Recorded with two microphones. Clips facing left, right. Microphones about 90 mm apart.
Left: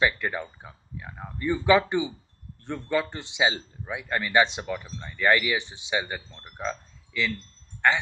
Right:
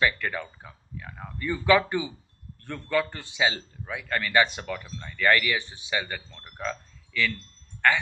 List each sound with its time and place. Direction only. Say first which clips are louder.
0.0 s a man's voice: left 1 dB; 20° left (ahead or behind)